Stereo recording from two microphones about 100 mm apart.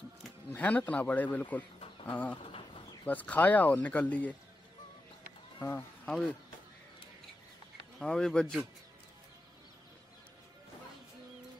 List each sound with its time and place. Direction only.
0.5 s speech: 15° left (ahead or behind)
5.6 s speech: 20° left (ahead or behind)
8.0 s speech: 5° left (ahead or behind)